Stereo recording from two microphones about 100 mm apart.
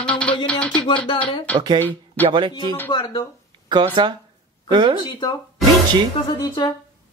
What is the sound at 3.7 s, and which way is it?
Speech, 50° right (ahead or behind).